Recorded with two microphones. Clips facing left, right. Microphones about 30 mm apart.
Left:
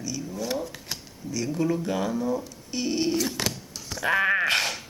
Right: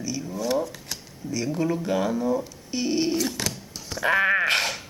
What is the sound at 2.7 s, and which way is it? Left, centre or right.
Dog, centre.